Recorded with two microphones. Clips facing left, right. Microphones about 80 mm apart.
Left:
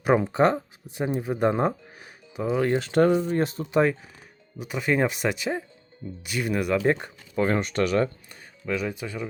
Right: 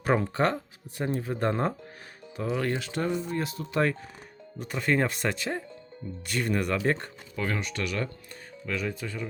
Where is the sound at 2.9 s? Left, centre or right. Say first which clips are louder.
Left 10 dB; left.